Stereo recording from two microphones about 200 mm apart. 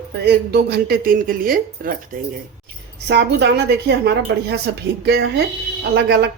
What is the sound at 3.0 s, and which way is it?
A woman's voice, 60° right (ahead or behind).